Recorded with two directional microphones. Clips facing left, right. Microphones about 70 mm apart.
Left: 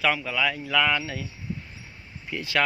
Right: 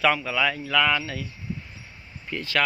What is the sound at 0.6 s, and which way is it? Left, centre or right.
Speech, centre.